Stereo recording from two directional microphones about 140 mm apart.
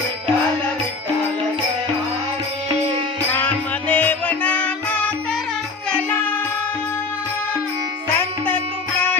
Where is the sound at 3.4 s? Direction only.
10° left (ahead or behind).